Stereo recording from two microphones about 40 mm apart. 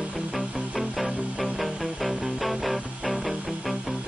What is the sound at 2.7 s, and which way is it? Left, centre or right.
Music, right.